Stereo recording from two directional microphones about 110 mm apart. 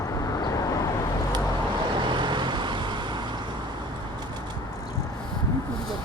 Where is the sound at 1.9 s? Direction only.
45° right (ahead or behind).